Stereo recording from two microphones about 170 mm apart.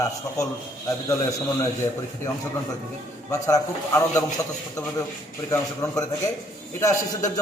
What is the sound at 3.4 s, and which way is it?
Speech, 20° left (ahead or behind).